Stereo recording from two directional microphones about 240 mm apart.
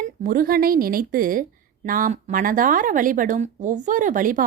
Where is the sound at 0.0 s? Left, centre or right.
Right.